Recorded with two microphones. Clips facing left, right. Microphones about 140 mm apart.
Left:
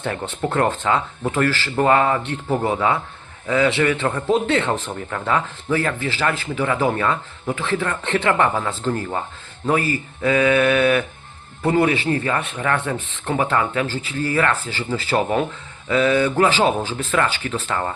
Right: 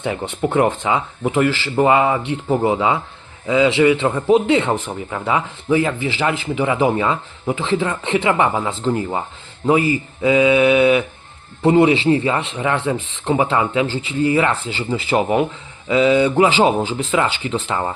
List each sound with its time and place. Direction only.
0.0 s speech: 15° right (ahead or behind)